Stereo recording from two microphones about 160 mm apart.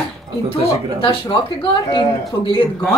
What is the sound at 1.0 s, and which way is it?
Speech, 35° left (ahead or behind).